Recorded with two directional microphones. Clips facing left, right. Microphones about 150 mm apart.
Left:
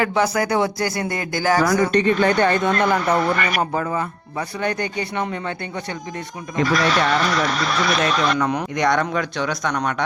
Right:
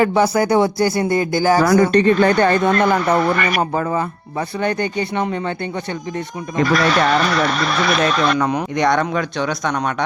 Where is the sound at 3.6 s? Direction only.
35° right (ahead or behind).